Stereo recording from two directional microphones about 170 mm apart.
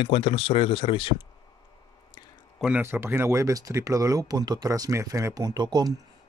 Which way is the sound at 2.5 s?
5° right (ahead or behind).